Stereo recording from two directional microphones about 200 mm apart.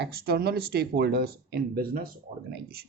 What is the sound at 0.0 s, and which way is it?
Speech, 50° right (ahead or behind).